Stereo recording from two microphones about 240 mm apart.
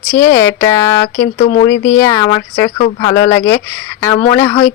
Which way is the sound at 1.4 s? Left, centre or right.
Left.